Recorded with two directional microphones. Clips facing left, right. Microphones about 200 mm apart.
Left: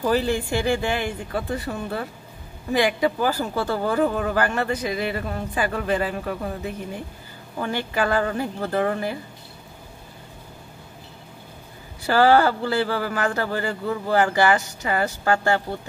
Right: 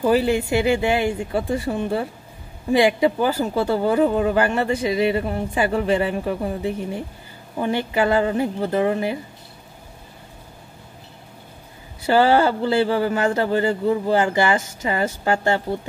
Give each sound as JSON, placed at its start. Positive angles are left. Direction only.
{"t": 0.0, "sound": "speech", "side_deg": -15}
{"t": 12.1, "sound": "speech", "side_deg": -20}